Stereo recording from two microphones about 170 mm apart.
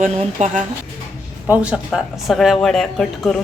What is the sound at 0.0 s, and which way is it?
Speech, 40° right (ahead or behind).